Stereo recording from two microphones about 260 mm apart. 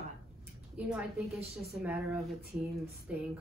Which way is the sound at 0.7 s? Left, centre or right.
Centre.